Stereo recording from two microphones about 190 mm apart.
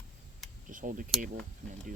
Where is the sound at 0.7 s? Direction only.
45° right (ahead or behind).